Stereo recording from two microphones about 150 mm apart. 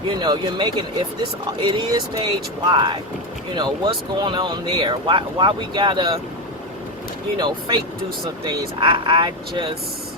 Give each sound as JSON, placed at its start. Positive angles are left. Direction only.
{"t": 0.1, "sound": "speech", "side_deg": -30}
{"t": 7.3, "sound": "speech", "side_deg": -30}